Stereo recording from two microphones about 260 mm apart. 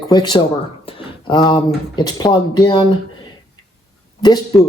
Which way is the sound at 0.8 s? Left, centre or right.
Centre.